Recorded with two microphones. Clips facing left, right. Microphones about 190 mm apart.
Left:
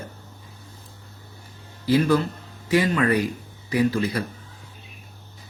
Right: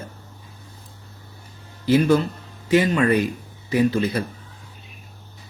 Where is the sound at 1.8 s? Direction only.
25° right (ahead or behind).